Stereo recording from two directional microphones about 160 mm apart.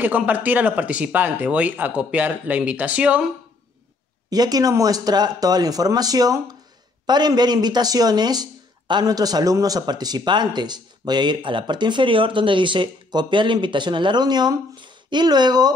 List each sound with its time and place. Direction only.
0.0 s speech: 10° right (ahead or behind)
4.3 s speech: 25° right (ahead or behind)